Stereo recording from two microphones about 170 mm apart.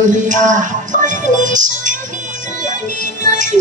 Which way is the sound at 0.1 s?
45° right (ahead or behind).